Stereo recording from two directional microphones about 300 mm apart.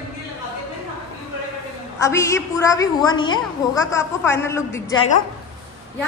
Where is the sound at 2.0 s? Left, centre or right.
Centre.